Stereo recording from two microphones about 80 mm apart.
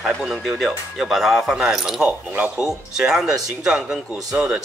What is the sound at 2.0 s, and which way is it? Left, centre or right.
Speech, centre.